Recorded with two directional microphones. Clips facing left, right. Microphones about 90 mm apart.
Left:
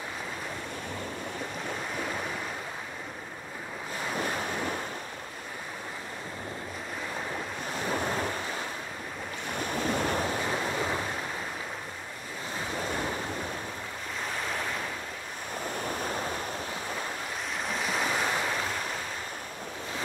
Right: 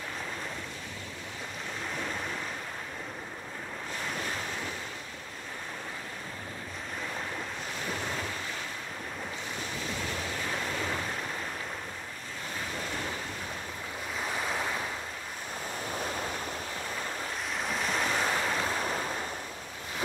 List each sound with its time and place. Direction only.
4.2 s waves: 15° left (ahead or behind)
7.8 s waves: 40° left (ahead or behind)
9.5 s waves: 55° left (ahead or behind)
10.4 s waves: 20° left (ahead or behind)
14.3 s waves: 5° right (ahead or behind)
17.6 s waves: centre (ahead or behind)